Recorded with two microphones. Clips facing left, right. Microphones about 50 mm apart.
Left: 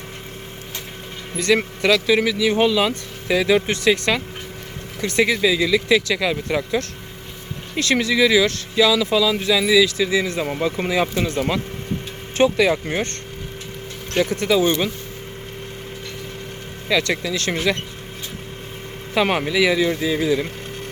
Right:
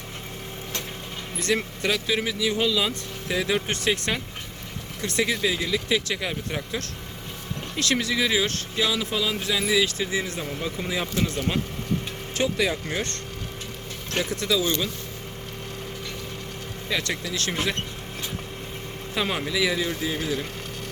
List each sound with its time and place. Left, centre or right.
1.4 s speech: left
3.9 s speech: left
10.2 s speech: left
12.4 s speech: left
16.9 s speech: left
19.1 s speech: left